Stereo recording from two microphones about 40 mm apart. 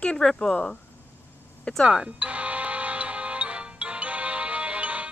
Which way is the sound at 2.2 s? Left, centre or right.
Right.